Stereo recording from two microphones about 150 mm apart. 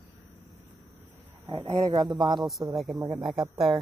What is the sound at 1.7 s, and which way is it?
Speech, 30° right (ahead or behind).